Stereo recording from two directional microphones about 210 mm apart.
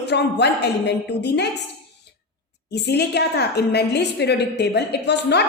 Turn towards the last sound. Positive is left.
turn(degrees=55)  # may be behind; listen again after turning